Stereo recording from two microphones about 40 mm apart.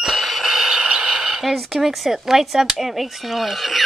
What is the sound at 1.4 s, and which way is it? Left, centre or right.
A woman's voice, centre.